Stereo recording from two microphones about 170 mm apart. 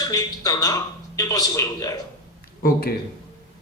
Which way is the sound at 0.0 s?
20° left (ahead or behind).